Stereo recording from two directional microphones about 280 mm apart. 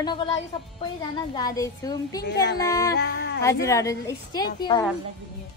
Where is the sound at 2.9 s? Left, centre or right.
Left.